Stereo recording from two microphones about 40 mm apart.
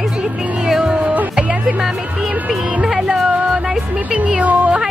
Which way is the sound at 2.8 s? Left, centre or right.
Centre.